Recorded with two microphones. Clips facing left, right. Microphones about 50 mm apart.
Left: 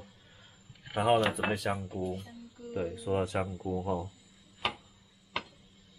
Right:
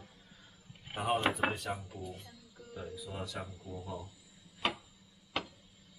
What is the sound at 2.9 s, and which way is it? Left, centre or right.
Speech, left.